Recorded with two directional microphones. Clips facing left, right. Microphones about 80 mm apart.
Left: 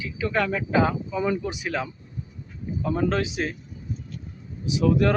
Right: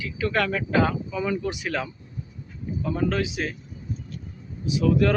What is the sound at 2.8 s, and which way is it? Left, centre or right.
Speech, left.